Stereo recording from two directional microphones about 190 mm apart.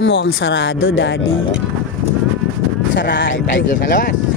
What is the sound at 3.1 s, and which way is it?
Speech, 75° left (ahead or behind).